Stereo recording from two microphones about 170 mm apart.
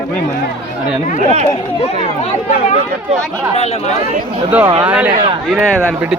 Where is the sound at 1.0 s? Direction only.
45° left (ahead or behind).